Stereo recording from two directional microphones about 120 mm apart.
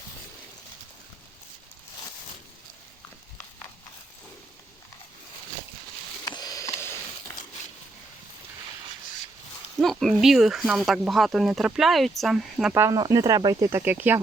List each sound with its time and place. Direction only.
6.2 s a sound: 35° left (ahead or behind)
9.8 s speech: centre (ahead or behind)
12.7 s speech: 20° right (ahead or behind)